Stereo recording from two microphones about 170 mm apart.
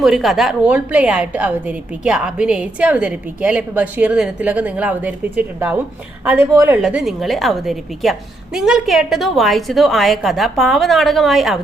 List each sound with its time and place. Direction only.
0.0 s a woman's voice: centre (ahead or behind); by 6.7 s 15° right (ahead or behind)
6.8 s a woman's voice: centre (ahead or behind)